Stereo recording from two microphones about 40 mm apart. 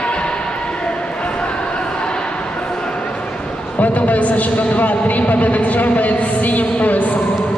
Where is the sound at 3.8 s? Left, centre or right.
Left.